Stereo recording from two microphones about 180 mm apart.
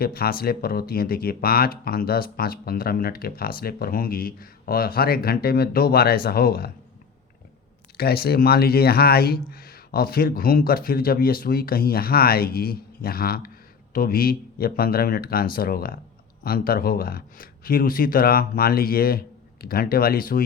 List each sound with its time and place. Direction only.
0.0 s speech: 55° left (ahead or behind)
7.9 s speech: 60° left (ahead or behind)